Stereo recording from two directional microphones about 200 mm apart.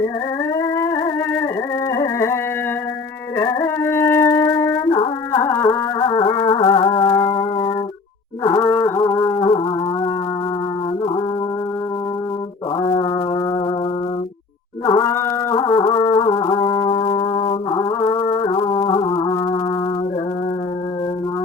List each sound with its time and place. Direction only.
0.6 s music: 15° left (ahead or behind)
12.8 s brass instrument: 25° left (ahead or behind)
14.8 s a sound: 15° left (ahead or behind)
15.5 s music: 25° left (ahead or behind)